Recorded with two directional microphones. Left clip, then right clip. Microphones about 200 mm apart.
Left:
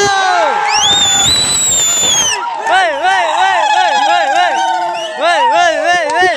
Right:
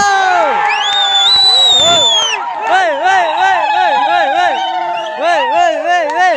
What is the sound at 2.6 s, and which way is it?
Speech, 10° right (ahead or behind).